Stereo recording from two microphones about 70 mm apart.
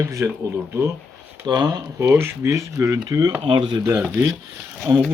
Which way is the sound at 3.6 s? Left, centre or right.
Right.